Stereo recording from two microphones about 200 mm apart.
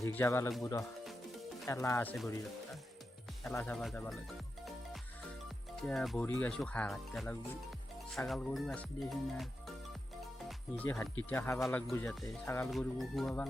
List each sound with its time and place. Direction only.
0.0 s speech: 10° left (ahead or behind)
3.5 s speech: 5° left (ahead or behind)
5.7 s speech: centre (ahead or behind)
10.8 s speech: 5° left (ahead or behind)
11.6 s speech: centre (ahead or behind)